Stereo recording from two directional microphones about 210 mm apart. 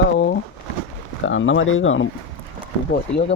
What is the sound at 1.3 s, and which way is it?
Speech, 65° left (ahead or behind).